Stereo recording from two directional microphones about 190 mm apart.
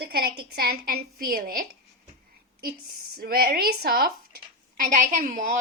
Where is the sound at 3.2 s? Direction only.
50° right (ahead or behind).